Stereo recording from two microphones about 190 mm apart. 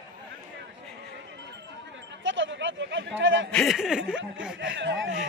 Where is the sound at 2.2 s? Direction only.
80° right.